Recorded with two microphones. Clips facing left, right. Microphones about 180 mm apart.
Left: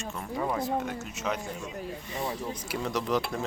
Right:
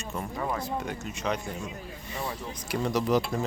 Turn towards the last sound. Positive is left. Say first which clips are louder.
# right 3 dB
turn(degrees=0)  # may be behind; listen again after turning